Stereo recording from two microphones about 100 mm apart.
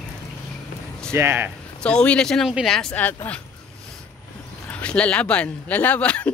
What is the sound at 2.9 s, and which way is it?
Speech, 15° left (ahead or behind).